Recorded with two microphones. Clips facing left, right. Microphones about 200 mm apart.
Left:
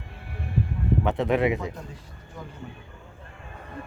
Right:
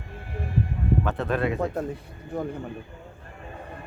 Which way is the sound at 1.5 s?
60° right (ahead or behind).